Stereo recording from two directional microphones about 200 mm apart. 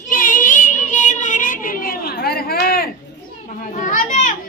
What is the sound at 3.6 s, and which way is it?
Children playing, 40° left (ahead or behind).